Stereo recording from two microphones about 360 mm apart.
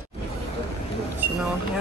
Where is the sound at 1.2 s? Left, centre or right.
Centre.